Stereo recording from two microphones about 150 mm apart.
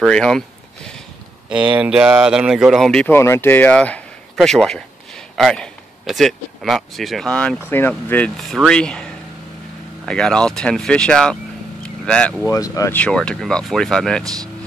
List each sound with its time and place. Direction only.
0.0 s speech: 5° left (ahead or behind)
1.5 s speech: 5° right (ahead or behind)
11.8 s vehicle: 5° left (ahead or behind)
12.4 s speech: 20° left (ahead or behind)
12.9 s speech: 5° left (ahead or behind)
14.2 s speech: 25° right (ahead or behind)